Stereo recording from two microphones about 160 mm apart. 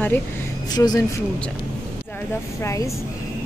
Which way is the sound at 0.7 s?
25° left (ahead or behind).